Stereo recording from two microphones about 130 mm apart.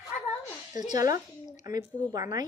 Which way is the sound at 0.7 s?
70° left (ahead or behind).